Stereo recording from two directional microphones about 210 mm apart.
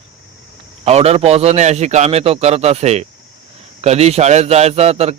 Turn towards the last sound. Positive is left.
turn(degrees=-30)  # may be behind; listen again after turning